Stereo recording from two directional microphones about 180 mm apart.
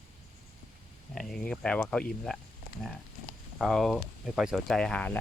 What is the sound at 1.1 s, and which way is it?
Speech, centre (ahead or behind).